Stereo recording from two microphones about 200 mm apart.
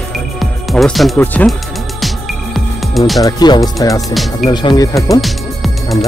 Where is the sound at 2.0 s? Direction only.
Centre (ahead or behind).